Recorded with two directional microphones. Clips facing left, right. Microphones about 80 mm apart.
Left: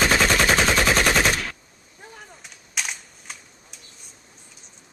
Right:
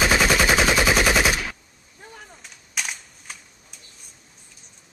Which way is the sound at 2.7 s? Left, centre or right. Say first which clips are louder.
Even; centre.